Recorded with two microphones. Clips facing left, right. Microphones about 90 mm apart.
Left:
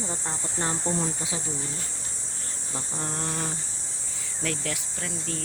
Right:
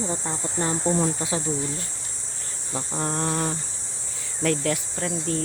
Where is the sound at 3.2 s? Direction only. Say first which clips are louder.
Right 7 dB; 55° right (ahead or behind).